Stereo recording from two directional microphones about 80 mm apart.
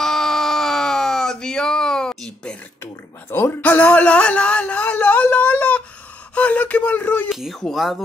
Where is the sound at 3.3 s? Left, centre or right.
Left.